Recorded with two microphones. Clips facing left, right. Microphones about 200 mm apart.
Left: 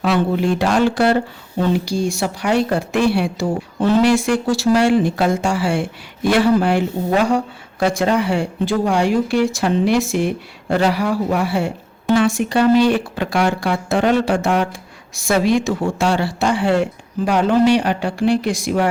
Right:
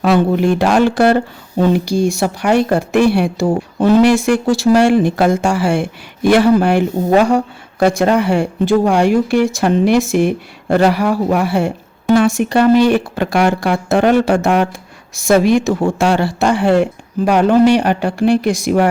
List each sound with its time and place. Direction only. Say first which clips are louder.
0.0 s speech: right 4 dB; 50° right (ahead or behind)
12.9 s speech: right 4 dB; 60° right (ahead or behind)
15.1 s speech: right 5 dB; 45° right (ahead or behind)
17.2 s speech: right 4 dB; 65° right (ahead or behind)
17.5 s speech: right 3 dB; 45° right (ahead or behind)